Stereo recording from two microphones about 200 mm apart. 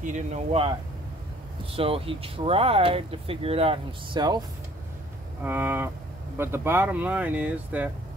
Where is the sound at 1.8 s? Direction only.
30° right (ahead or behind).